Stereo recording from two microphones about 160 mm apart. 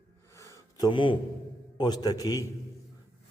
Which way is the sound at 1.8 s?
25° left (ahead or behind).